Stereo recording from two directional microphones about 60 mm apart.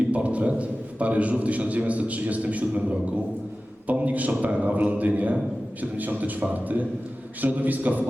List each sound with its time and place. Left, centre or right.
0.1 s a man's voice: right